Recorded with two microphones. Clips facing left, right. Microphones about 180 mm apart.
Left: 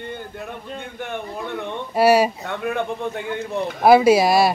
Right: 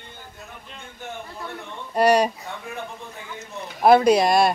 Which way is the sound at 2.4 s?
70° left (ahead or behind).